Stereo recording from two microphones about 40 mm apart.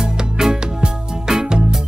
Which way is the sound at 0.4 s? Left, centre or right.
Centre.